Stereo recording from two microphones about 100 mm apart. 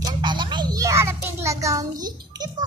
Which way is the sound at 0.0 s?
50° right (ahead or behind).